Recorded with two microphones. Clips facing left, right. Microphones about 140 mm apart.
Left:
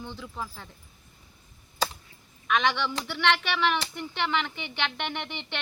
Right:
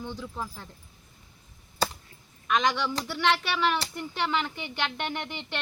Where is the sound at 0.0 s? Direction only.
10° right (ahead or behind).